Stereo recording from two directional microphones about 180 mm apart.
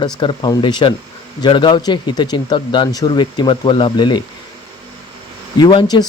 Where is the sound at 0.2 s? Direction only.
25° left (ahead or behind).